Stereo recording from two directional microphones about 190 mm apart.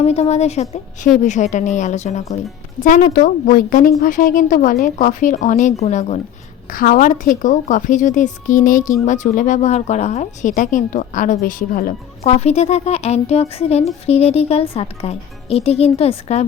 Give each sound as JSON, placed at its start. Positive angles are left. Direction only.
{"t": 0.0, "sound": "speech", "side_deg": 35}
{"t": 3.1, "sound": "a woman's voice", "side_deg": 50}
{"t": 12.2, "sound": "speech", "side_deg": 35}